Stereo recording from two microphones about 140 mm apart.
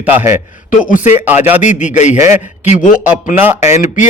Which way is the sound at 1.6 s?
60° left (ahead or behind).